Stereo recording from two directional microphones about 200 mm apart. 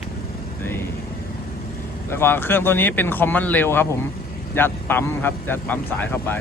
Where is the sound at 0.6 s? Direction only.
10° left (ahead or behind).